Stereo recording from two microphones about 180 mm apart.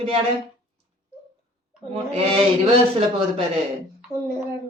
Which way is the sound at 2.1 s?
35° right (ahead or behind).